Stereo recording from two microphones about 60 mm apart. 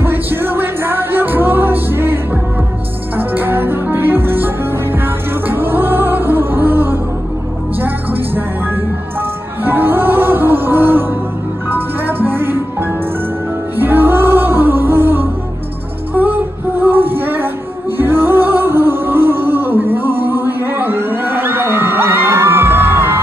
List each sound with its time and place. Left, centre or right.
0.0 s music: right
3.2 s music: right
9.7 s music: right
16.8 s a sound: right
17.9 s music: right